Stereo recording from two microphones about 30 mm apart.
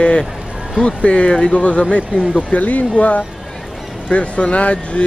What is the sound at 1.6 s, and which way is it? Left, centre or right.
Speech, left.